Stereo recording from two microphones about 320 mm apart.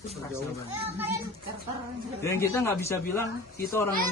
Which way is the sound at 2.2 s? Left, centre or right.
Centre.